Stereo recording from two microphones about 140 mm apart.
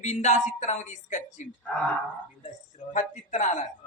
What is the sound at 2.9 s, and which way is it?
Speech, 60° left (ahead or behind).